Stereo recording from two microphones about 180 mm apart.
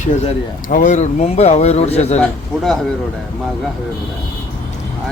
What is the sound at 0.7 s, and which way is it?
Speech, 45° left (ahead or behind).